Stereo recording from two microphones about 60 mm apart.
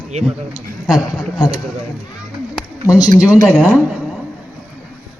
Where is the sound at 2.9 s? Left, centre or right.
Left.